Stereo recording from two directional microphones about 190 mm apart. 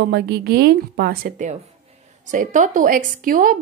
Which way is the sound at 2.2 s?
40° right (ahead or behind).